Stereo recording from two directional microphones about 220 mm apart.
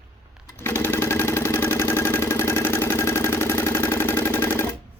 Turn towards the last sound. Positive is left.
turn(degrees=10)  # may be behind; listen again after turning